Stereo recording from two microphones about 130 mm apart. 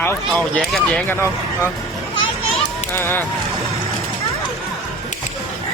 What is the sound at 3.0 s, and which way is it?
Speech, 15° left (ahead or behind).